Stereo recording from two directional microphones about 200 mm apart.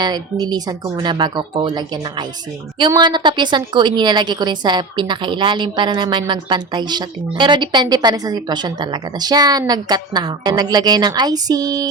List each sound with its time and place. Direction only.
0.0 s a woman's voice: 20° right (ahead or behind)